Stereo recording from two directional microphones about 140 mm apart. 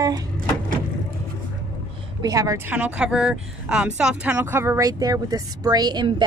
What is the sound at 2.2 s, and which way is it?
Speech, 25° right (ahead or behind).